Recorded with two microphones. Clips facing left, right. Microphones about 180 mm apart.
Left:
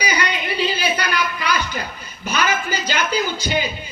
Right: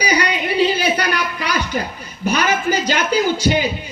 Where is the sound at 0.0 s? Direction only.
35° right (ahead or behind).